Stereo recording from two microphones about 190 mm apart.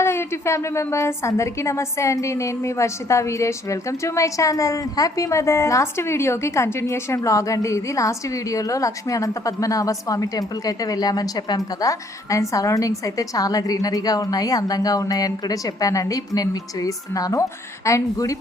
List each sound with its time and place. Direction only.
0.0 s a woman's voice: 15° left (ahead or behind)